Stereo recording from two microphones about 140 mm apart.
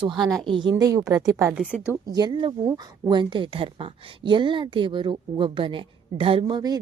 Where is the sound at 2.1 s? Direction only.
30° right (ahead or behind).